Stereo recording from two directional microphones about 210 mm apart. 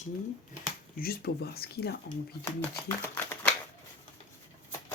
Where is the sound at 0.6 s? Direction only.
45° left (ahead or behind).